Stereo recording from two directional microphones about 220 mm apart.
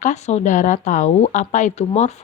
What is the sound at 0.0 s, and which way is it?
Speech, 30° left (ahead or behind).